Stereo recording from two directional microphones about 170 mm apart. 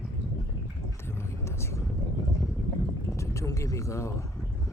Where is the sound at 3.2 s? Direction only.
15° left (ahead or behind).